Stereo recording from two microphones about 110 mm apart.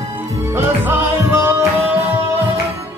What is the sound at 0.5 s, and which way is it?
Music, 25° right (ahead or behind).